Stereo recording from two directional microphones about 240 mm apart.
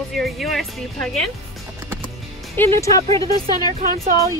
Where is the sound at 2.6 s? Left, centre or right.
Centre.